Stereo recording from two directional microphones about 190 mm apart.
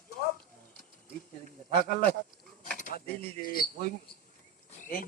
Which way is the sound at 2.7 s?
45° left (ahead or behind).